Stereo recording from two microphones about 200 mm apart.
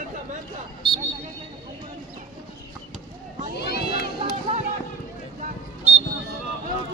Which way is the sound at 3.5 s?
50° left (ahead or behind).